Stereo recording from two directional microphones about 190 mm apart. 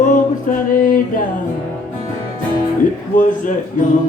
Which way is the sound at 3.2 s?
45° left (ahead or behind).